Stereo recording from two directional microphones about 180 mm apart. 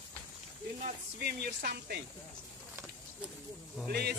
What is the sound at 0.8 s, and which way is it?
Speech, 55° right (ahead or behind).